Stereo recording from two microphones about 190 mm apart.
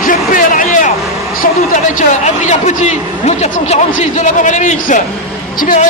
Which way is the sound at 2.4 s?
40° left (ahead or behind).